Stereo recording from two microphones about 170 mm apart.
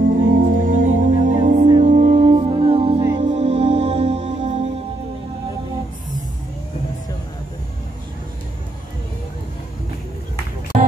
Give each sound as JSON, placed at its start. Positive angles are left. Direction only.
{"t": 0.4, "sound": "music", "side_deg": -55}
{"t": 10.7, "sound": "music", "side_deg": -40}